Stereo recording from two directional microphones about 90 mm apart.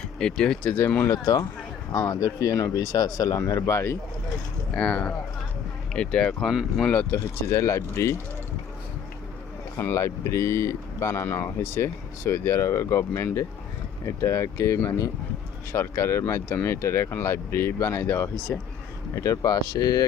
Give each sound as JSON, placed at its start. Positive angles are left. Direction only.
{"t": 0.2, "sound": "speech", "side_deg": 10}
{"t": 1.0, "sound": "speech", "side_deg": 40}
{"t": 4.7, "sound": "speech", "side_deg": 10}
{"t": 6.5, "sound": "speech", "side_deg": -10}
{"t": 7.4, "sound": "speech", "side_deg": 35}
{"t": 9.7, "sound": "speech", "side_deg": 25}
{"t": 18.5, "sound": "speech", "side_deg": 20}
{"t": 19.1, "sound": "speech", "side_deg": 35}